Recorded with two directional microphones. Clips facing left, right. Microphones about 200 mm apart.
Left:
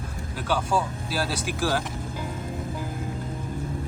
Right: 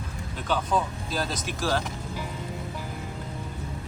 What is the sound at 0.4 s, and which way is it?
Speech, 10° left (ahead or behind).